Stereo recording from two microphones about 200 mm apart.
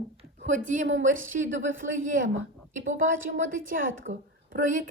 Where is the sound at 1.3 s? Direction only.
45° right (ahead or behind).